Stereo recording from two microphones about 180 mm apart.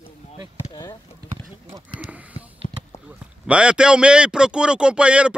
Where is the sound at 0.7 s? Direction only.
25° left (ahead or behind).